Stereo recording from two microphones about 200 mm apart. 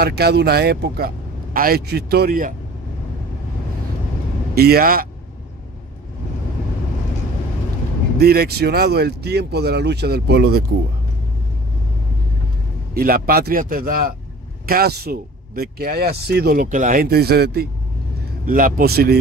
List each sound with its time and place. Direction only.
0.0 s speech: 55° right (ahead or behind)
4.6 s speech: 50° right (ahead or behind)
8.2 s speech: 50° right (ahead or behind)
12.9 s speech: 50° right (ahead or behind)